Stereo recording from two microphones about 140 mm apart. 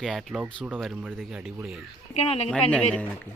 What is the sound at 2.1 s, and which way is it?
Speech, 50° left (ahead or behind).